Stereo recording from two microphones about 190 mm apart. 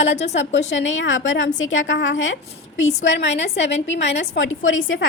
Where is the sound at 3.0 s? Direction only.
70° left (ahead or behind).